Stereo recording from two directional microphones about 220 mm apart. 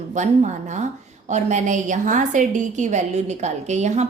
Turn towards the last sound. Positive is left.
turn(degrees=-30)  # may be behind; listen again after turning